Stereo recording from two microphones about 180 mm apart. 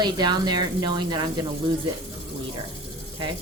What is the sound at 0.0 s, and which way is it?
Speech, 25° right (ahead or behind).